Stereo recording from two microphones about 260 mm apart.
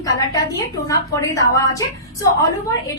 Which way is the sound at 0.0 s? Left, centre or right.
Centre.